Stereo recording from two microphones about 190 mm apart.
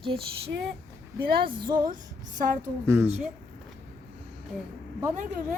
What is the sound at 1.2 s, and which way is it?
Music, 55° right (ahead or behind).